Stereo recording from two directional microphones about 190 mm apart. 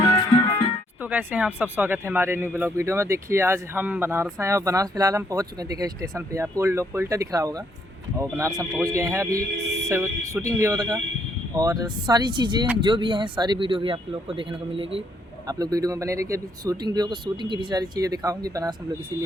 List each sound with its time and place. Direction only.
1.0 s speech: 10° right (ahead or behind)